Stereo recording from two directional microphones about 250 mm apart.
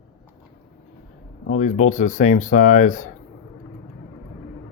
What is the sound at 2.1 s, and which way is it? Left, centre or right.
Speech, left.